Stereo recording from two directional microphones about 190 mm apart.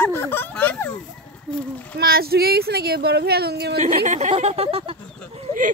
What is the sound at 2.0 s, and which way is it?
Speech, 55° right (ahead or behind).